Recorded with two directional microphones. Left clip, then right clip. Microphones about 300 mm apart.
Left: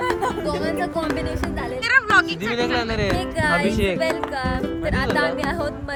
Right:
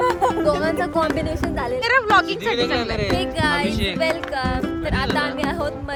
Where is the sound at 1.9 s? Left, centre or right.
Centre.